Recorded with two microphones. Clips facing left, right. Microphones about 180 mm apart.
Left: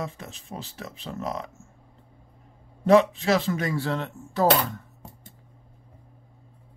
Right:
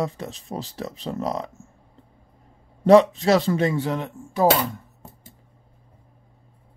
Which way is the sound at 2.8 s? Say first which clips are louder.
Right 4 dB; 35° right (ahead or behind).